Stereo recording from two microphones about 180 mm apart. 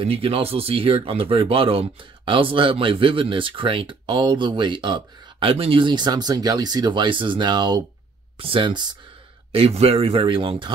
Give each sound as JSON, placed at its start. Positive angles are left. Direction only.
{"t": 0.0, "sound": "speech", "side_deg": -30}